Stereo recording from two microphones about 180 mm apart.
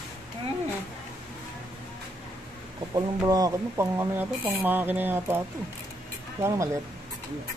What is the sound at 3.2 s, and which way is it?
Speech, 20° right (ahead or behind).